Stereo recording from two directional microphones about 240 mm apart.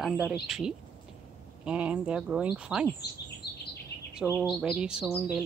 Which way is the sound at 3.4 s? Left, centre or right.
Left.